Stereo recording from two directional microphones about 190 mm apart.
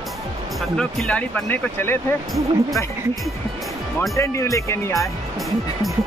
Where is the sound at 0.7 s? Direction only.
5° left (ahead or behind).